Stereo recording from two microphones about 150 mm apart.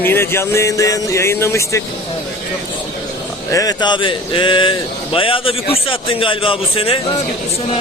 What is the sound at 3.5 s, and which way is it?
A man's voice, 25° left (ahead or behind).